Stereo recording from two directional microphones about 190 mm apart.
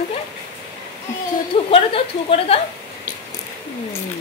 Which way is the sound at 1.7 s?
30° left (ahead or behind).